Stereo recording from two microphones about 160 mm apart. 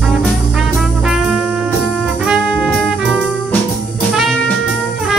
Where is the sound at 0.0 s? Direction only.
Centre (ahead or behind).